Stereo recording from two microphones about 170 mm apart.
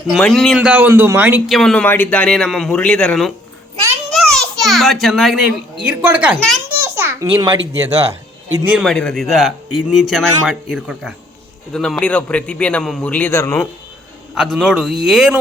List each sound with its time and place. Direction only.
0.1 s speech: centre (ahead or behind)
1.5 s a man's voice: centre (ahead or behind)
6.7 s a sound: 15° right (ahead or behind)
8.6 s speech: 5° right (ahead or behind)
8.9 s a man's voice: 5° left (ahead or behind)
14.3 s a man's voice: 5° right (ahead or behind)